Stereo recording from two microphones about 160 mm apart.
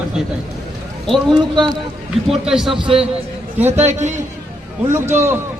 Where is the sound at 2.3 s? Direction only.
Centre (ahead or behind).